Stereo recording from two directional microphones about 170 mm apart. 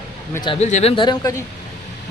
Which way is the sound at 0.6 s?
45° left (ahead or behind).